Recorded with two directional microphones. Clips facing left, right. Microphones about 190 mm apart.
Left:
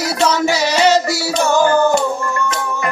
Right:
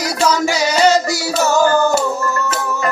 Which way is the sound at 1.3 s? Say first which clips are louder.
Even; 5° right (ahead or behind).